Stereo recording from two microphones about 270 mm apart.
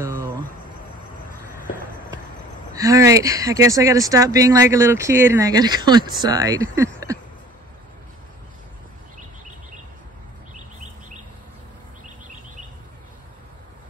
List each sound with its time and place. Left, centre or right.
0.0 s cricket: centre
2.7 s speech: centre
10.5 s bird: right